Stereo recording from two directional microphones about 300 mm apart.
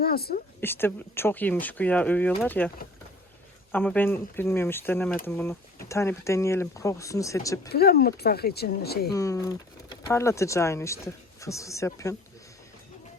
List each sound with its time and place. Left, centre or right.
0.0 s speech: left
0.6 s speech: centre
7.7 s speech: left
9.1 s speech: centre